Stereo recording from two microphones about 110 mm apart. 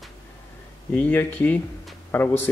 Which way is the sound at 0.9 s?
15° left (ahead or behind).